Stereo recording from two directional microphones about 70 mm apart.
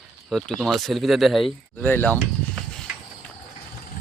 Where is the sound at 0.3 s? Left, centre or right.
Centre.